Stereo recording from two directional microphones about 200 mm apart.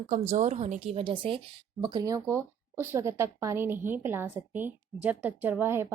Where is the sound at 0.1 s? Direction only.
35° right (ahead or behind).